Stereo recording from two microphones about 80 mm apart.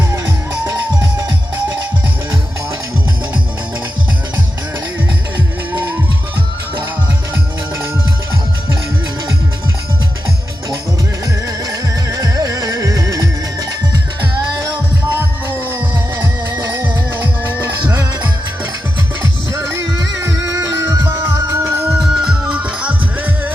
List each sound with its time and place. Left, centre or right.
12.1 s music: right
17.4 s music: right
19.8 s music: right
21.2 s music: right
21.9 s music: centre